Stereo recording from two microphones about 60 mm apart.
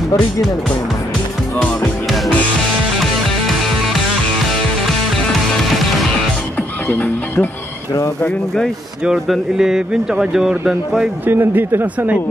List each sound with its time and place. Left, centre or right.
2.0 s music: centre
6.9 s speech: left
9.3 s mantra: centre
11.2 s speech: right